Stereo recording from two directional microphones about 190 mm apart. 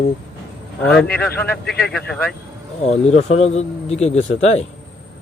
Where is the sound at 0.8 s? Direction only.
5° left (ahead or behind).